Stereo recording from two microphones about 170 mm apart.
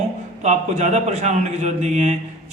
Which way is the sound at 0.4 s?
45° right (ahead or behind).